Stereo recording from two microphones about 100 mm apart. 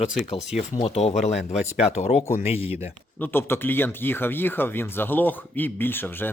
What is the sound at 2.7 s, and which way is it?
Speech, 25° right (ahead or behind).